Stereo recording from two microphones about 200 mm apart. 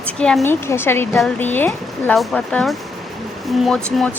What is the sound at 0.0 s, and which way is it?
Speech, 5° left (ahead or behind).